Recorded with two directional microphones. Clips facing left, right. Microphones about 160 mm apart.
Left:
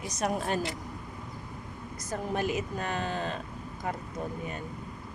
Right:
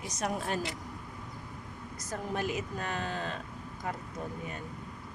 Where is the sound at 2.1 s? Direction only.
20° left (ahead or behind).